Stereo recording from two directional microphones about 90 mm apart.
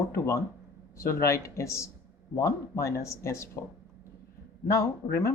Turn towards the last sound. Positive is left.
turn(degrees=35)  # may be behind; listen again after turning